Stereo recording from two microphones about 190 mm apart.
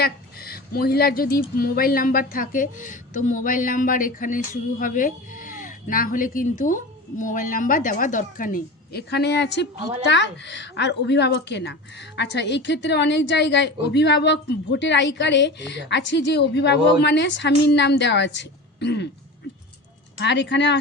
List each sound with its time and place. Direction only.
0.0 s a woman's voice: 55° left (ahead or behind)
20.1 s speech: 65° left (ahead or behind)